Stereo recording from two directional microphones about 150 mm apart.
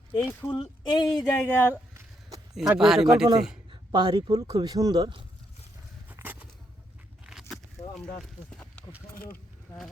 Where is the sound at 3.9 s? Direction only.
30° right (ahead or behind).